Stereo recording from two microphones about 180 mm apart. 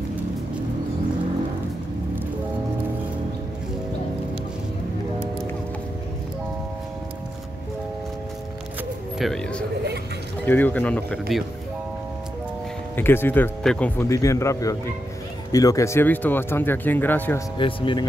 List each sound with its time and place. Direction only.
9.2 s speech: 5° left (ahead or behind)
12.9 s speech: 10° left (ahead or behind)
17.6 s speech: 30° left (ahead or behind)